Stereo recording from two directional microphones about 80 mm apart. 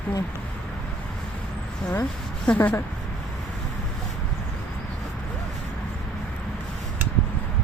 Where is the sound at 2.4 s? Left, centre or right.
Centre.